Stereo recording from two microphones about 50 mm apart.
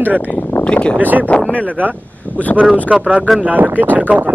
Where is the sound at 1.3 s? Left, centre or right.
Left.